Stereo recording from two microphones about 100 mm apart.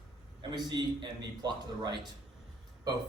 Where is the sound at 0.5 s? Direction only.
45° right (ahead or behind).